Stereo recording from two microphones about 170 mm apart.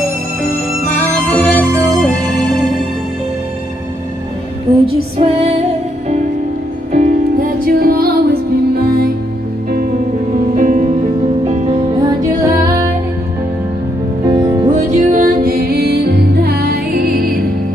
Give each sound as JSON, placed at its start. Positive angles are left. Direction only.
{"t": 1.3, "sound": "music", "side_deg": 5}
{"t": 1.7, "sound": "music", "side_deg": -20}
{"t": 2.0, "sound": "music", "side_deg": 5}
{"t": 4.8, "sound": "female singing", "side_deg": -35}
{"t": 6.9, "sound": "music", "side_deg": -45}
{"t": 10.5, "sound": "music", "side_deg": -45}
{"t": 12.2, "sound": "music", "side_deg": -20}
{"t": 14.3, "sound": "music", "side_deg": -25}
{"t": 14.7, "sound": "music", "side_deg": -45}